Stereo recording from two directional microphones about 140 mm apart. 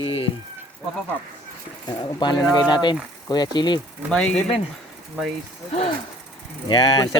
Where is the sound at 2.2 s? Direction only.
35° left (ahead or behind).